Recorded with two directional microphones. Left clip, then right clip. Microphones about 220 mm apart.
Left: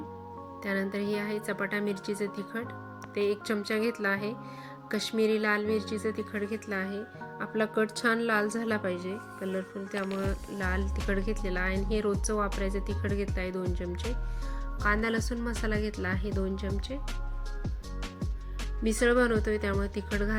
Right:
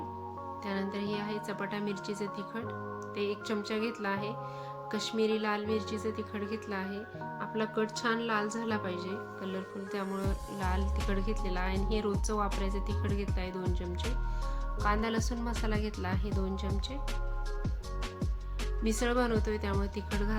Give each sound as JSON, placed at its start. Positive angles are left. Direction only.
{"t": 0.6, "sound": "speech", "side_deg": 15}
{"t": 13.7, "sound": "music", "side_deg": 0}
{"t": 14.8, "sound": "speech", "side_deg": 5}
{"t": 18.8, "sound": "speech", "side_deg": 10}